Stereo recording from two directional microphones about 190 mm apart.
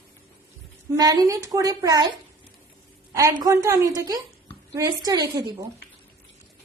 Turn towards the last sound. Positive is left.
turn(degrees=-20)  # may be behind; listen again after turning